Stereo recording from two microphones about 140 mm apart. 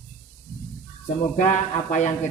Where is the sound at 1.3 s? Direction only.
60° left (ahead or behind).